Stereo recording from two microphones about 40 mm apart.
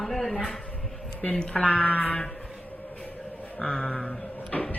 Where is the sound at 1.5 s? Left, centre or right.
Left.